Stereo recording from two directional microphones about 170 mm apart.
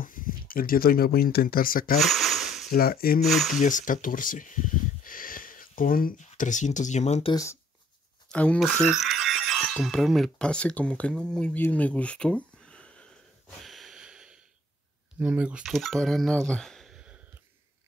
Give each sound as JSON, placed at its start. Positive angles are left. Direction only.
{"t": 0.0, "sound": "speech", "side_deg": 55}
{"t": 2.0, "sound": "a sound", "side_deg": 0}
{"t": 2.7, "sound": "speech", "side_deg": 60}
{"t": 3.3, "sound": "speech", "side_deg": 0}
{"t": 3.6, "sound": "speech", "side_deg": 50}
{"t": 8.3, "sound": "speech", "side_deg": 5}
{"t": 13.7, "sound": "snort", "side_deg": 0}
{"t": 15.1, "sound": "speech", "side_deg": -10}